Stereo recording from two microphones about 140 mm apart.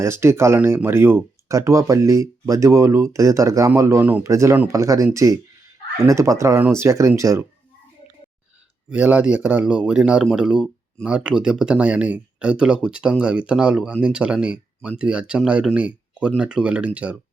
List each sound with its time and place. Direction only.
0.0 s speech: 20° right (ahead or behind)
8.9 s speech: 10° right (ahead or behind)